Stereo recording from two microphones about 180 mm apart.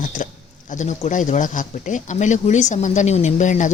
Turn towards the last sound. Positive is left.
turn(degrees=45)  # may be behind; listen again after turning